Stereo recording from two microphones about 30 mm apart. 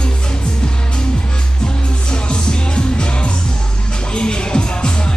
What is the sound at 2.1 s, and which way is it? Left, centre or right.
Music, left.